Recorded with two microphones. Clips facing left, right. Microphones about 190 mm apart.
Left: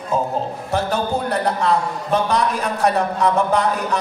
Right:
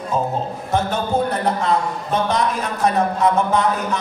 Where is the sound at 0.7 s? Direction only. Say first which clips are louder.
Right 1 dB; 35° left (ahead or behind).